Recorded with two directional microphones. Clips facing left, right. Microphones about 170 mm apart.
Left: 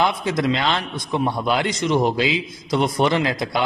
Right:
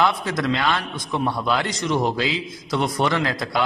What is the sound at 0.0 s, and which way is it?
A man's voice, 20° left (ahead or behind).